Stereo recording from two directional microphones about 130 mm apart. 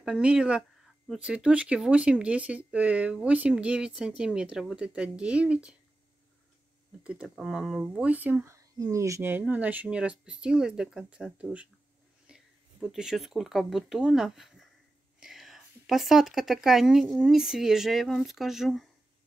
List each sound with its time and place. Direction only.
0.0 s speech: 5° right (ahead or behind)
7.0 s speech: 10° right (ahead or behind)
8.5 s speech: 25° right (ahead or behind); by 11.7 s 10° right (ahead or behind)
12.3 s a sound: 5° right (ahead or behind)
12.8 s speech: 5° right (ahead or behind)